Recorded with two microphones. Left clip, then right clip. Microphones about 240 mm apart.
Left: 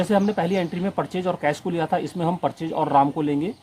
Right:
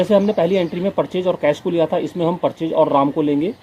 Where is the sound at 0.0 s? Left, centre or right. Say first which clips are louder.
Right 6 dB; left.